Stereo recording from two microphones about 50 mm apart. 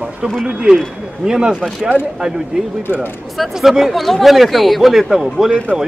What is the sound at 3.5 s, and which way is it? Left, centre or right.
Speech, centre.